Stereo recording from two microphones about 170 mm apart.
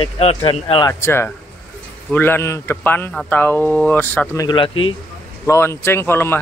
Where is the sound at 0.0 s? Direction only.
35° left (ahead or behind).